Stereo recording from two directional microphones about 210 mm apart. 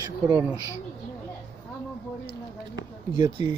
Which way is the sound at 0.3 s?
5° right (ahead or behind).